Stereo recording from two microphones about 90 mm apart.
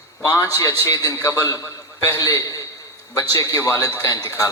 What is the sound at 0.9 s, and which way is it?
A man's voice, 40° left (ahead or behind).